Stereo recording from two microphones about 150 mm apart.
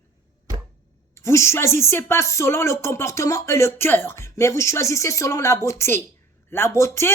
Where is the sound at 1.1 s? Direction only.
20° left (ahead or behind).